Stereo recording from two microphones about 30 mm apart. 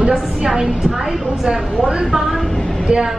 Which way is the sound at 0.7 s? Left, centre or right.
Centre.